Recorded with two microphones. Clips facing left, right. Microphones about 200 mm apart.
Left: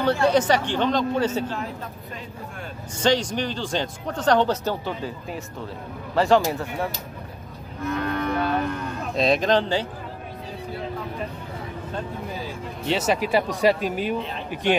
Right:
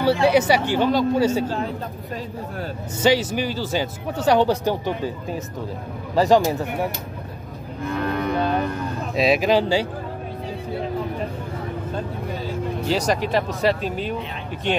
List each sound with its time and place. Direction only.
0.0 s speech: 10° right (ahead or behind)
3.0 s speech: 5° right (ahead or behind)
6.1 s speech: 15° right (ahead or behind)
7.8 s cattle: 30° right (ahead or behind)
9.1 s speech: 5° right (ahead or behind)
12.8 s speech: 5° left (ahead or behind)